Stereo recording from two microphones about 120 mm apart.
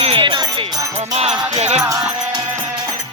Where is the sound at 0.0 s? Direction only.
50° right (ahead or behind).